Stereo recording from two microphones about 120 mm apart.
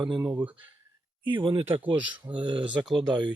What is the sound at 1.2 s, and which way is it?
Speech, 45° right (ahead or behind).